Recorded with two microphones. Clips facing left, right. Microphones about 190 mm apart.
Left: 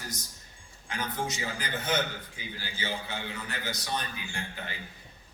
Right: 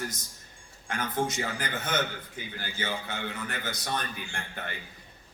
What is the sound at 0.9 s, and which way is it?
A man's voice, 55° right (ahead or behind).